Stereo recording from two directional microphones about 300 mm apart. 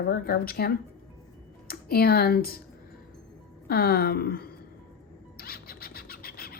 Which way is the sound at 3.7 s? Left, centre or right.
Left.